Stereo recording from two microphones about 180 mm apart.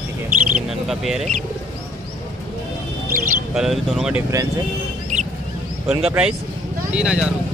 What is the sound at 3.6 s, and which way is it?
Speech, centre (ahead or behind).